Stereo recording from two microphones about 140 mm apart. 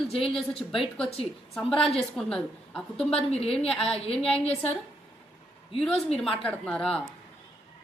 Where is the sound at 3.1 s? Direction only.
45° left (ahead or behind).